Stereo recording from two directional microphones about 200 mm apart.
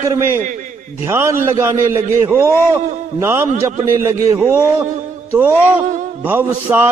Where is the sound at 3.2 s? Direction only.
10° right (ahead or behind).